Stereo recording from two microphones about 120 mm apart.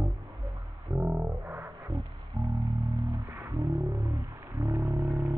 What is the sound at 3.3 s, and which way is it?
Music, 20° right (ahead or behind).